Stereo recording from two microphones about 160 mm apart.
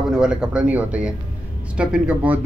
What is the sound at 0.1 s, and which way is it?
Speech, 5° right (ahead or behind).